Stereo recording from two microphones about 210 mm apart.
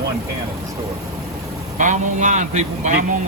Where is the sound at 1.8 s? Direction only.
35° right (ahead or behind).